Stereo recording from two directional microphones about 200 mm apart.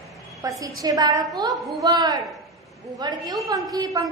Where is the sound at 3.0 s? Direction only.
20° right (ahead or behind).